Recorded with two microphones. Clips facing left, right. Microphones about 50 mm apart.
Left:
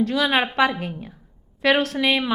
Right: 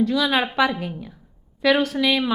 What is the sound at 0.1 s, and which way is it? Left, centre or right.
A woman's voice, left.